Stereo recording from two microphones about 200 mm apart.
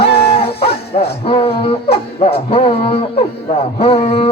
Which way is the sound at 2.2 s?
30° left (ahead or behind).